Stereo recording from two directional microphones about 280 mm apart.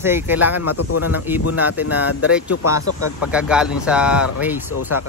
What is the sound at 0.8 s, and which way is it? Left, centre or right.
Speech, left.